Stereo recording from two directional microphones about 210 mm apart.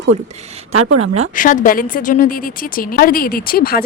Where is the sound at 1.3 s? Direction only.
40° left (ahead or behind).